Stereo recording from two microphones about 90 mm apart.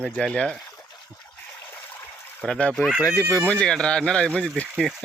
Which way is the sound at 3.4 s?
10° left (ahead or behind).